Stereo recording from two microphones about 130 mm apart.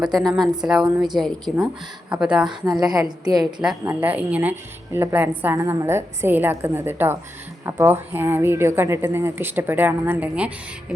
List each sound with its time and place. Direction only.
0.0 s a woman's voice: centre (ahead or behind)
2.6 s a woman's voice: 30° right (ahead or behind)
3.8 s a woman's voice: 15° right (ahead or behind)